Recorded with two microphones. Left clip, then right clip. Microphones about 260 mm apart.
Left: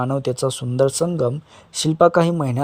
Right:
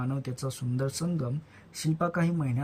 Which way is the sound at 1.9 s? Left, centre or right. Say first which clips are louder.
Left 16 dB; left.